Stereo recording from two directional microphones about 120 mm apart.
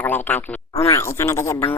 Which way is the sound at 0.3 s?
15° left (ahead or behind).